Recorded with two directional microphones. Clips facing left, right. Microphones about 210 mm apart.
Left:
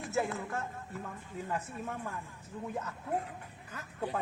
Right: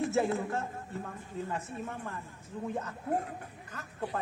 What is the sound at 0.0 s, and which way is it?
Speech, 25° right (ahead or behind).